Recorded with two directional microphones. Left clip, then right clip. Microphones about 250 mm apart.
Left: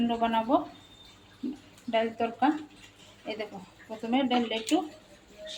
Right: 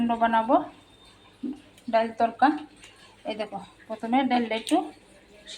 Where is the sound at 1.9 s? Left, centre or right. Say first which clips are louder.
Right 5 dB; centre.